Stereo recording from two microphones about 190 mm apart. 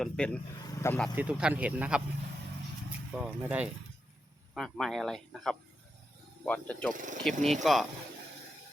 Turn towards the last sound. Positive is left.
turn(degrees=0)  # may be behind; listen again after turning